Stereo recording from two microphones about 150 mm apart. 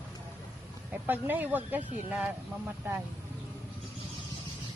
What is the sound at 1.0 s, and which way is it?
Speech, 10° right (ahead or behind).